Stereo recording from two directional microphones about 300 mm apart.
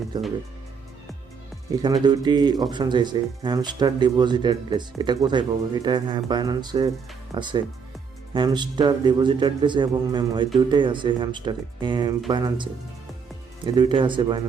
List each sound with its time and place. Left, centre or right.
0.1 s speech: centre
1.8 s speech: centre
13.7 s speech: centre